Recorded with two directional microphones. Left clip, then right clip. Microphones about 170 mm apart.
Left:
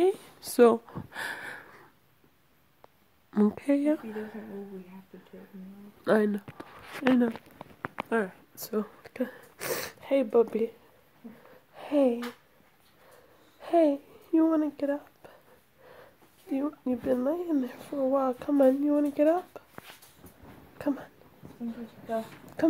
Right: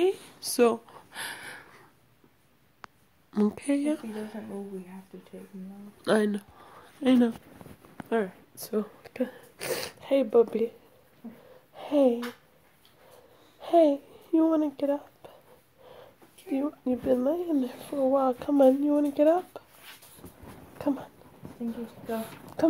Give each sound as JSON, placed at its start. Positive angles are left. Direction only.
{"t": 0.0, "sound": "a sound", "side_deg": 20}
{"t": 3.3, "sound": "speech", "side_deg": 10}
{"t": 6.0, "sound": "speech", "side_deg": 5}
{"t": 8.1, "sound": "speech", "side_deg": 5}
{"t": 11.2, "sound": "wheeze", "side_deg": -25}
{"t": 11.7, "sound": "a sound", "side_deg": 0}
{"t": 13.6, "sound": "speech", "side_deg": 0}
{"t": 20.7, "sound": "speech", "side_deg": 5}